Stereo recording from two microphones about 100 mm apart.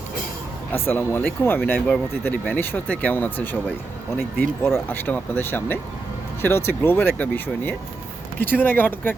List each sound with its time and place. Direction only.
0.7 s speech: 20° left (ahead or behind)